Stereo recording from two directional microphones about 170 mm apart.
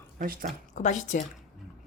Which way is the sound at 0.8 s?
45° left (ahead or behind).